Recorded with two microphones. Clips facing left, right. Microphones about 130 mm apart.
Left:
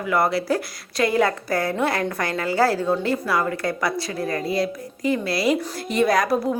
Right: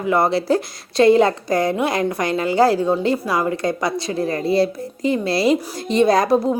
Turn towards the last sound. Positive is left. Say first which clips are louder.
# right 4 dB
turn(degrees=-25)  # may be behind; listen again after turning